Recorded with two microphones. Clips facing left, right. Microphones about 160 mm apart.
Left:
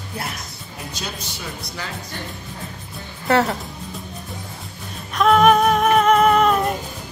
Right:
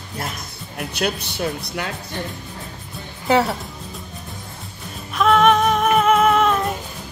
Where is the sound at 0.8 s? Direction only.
65° right (ahead or behind).